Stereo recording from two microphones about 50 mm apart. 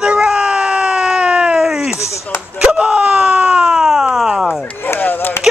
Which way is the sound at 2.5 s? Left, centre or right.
Centre.